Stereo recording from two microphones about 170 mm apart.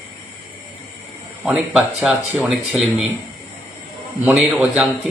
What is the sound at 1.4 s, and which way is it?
A man's voice, 5° right (ahead or behind).